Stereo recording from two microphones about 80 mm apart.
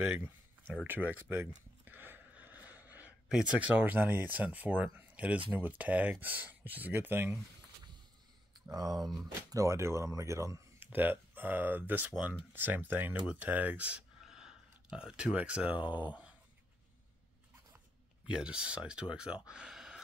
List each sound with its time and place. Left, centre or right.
0.0 s a sound: right
3.3 s speech: centre
8.6 s speech: right
10.8 s speech: right
18.2 s speech: centre